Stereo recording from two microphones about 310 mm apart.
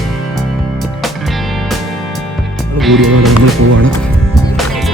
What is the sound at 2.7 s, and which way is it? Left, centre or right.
Speech, centre.